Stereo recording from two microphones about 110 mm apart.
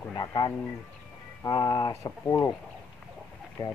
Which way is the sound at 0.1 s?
35° left (ahead or behind).